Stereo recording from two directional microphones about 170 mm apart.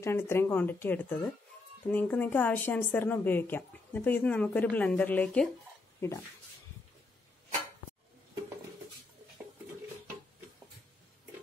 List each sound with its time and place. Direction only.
0.0 s speech: 15° left (ahead or behind)